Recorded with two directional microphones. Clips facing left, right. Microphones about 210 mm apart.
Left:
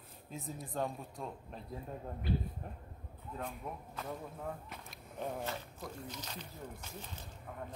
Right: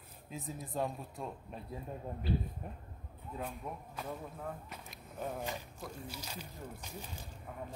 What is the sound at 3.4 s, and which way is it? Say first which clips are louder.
Speech: right 1 dB; centre (ahead or behind).